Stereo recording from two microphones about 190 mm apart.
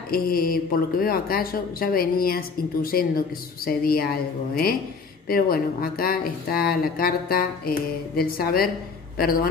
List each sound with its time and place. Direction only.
0.1 s speech: 50° left (ahead or behind)
5.3 s speech: 50° left (ahead or behind)